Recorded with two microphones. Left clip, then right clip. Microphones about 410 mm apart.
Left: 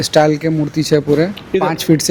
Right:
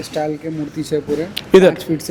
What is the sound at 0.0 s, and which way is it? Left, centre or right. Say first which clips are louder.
Speech: left 10 dB; left.